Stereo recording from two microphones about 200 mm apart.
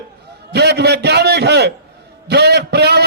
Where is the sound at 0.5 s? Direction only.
55° right (ahead or behind).